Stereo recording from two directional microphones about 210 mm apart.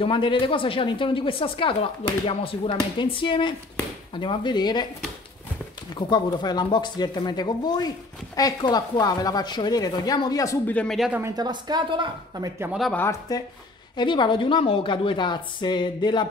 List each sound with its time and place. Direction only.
0.0 s speech: 25° left (ahead or behind)
5.9 s a woman's voice: 20° left (ahead or behind); by 13.0 s centre (ahead or behind)
13.3 s a woman's voice: 20° left (ahead or behind)